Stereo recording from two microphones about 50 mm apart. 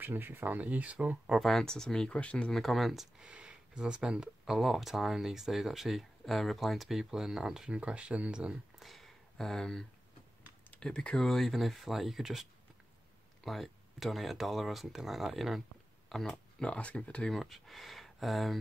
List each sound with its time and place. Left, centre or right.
0.0 s speech: right
1.4 s speech: centre
2.0 s speech: left
2.5 s speech: centre
3.2 s speech: right
4.6 s speech: centre
7.7 s speech: right
8.7 s a sound: centre
10.8 s speech: centre
16.6 s speech: left
17.3 s speech: centre